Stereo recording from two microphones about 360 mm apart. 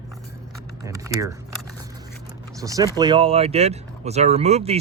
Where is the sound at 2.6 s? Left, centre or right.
Centre.